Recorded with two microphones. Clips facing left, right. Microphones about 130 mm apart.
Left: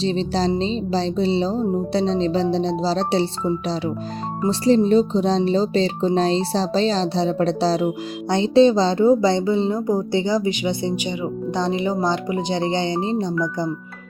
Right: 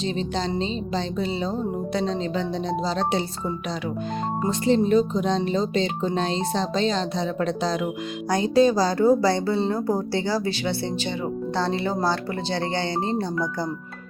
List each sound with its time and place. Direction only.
0.0 s speech: 35° left (ahead or behind)
4.4 s speech: 35° left (ahead or behind); by 13.7 s 20° left (ahead or behind)